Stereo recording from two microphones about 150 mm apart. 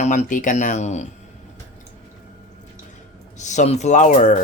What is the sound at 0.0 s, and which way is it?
Speech, 50° left (ahead or behind).